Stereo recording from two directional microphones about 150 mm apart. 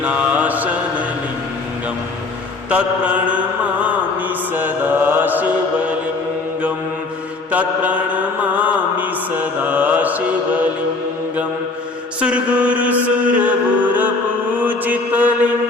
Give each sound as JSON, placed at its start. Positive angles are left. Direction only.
{"t": 0.0, "sound": "mantra", "side_deg": -10}
{"t": 2.6, "sound": "mantra", "side_deg": -10}
{"t": 4.5, "sound": "mantra", "side_deg": -10}
{"t": 7.5, "sound": "mantra", "side_deg": -10}
{"t": 12.2, "sound": "mantra", "side_deg": -10}